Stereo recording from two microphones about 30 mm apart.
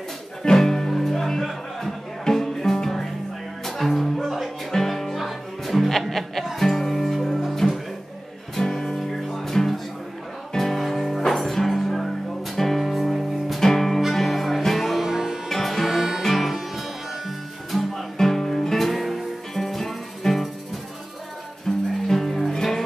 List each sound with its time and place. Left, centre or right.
0.4 s music: centre
8.5 s music: centre
15.0 s music: centre
15.4 s music: centre
15.9 s music: centre
16.2 s music: centre
21.7 s music: centre